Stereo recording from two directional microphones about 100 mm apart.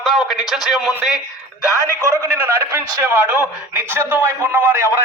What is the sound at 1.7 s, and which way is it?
Speech, 30° left (ahead or behind).